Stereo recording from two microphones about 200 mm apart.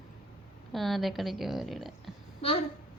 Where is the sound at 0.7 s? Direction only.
Centre (ahead or behind).